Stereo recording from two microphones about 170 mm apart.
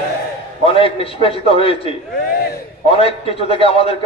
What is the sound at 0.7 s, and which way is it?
A man's voice, 35° left (ahead or behind).